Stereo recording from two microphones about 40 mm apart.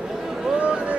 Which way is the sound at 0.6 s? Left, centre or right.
Right.